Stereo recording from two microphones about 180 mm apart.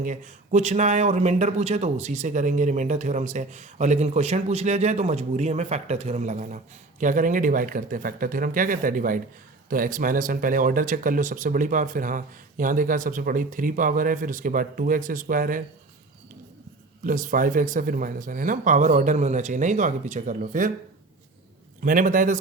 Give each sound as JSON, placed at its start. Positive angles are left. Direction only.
{"t": 0.0, "sound": "speech", "side_deg": -40}
{"t": 17.0, "sound": "speech", "side_deg": -50}
{"t": 21.8, "sound": "speech", "side_deg": -50}